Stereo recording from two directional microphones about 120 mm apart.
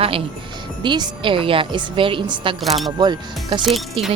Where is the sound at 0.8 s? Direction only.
40° right (ahead or behind).